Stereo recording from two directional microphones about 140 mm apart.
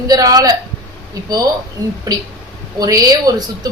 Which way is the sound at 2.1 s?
25° right (ahead or behind).